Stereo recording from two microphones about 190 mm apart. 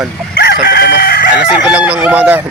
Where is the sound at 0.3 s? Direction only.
60° left (ahead or behind).